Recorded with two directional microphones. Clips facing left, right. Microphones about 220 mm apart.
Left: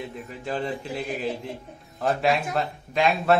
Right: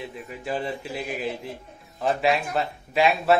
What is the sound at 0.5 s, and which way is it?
A man's voice, 5° right (ahead or behind).